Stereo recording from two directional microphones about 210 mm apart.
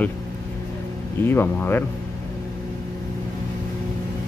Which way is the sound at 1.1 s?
10° left (ahead or behind).